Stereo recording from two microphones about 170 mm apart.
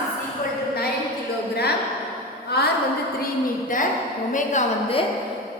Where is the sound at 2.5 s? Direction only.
70° left (ahead or behind).